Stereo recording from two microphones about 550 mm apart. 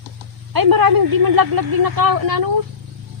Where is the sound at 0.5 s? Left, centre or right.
Right.